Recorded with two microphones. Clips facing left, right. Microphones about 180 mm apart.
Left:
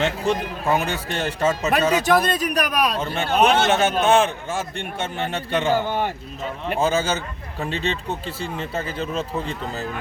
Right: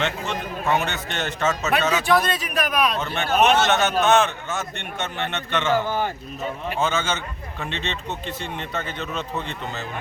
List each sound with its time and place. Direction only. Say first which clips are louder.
0.0 s a man's voice: left 5 dB; 35° left (ahead or behind)
6.7 s a man's voice: left 4 dB; 35° left (ahead or behind)